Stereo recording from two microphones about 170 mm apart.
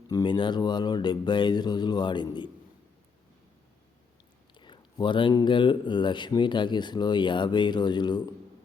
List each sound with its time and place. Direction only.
0.1 s speech: 25° left (ahead or behind)
4.5 s speech: 25° left (ahead or behind)